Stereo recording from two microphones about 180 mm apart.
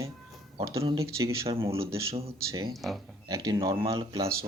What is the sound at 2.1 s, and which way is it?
Speech, 35° right (ahead or behind).